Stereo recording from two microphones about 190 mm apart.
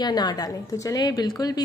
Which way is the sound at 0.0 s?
20° left (ahead or behind).